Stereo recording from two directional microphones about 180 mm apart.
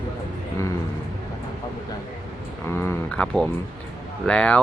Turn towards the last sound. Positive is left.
turn(degrees=5)  # may be behind; listen again after turning